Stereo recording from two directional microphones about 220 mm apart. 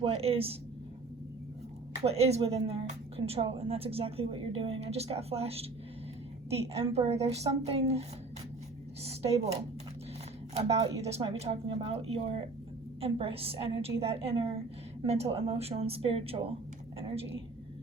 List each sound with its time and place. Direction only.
0.0 s a woman's voice: 25° right (ahead or behind)
2.0 s a woman's voice: 30° right (ahead or behind)
9.0 s a woman's voice: 30° right (ahead or behind)
10.5 s a woman's voice: 30° right (ahead or behind)